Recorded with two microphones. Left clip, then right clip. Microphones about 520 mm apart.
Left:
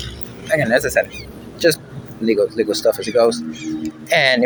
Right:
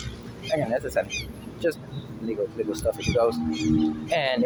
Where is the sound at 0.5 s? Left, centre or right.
Right.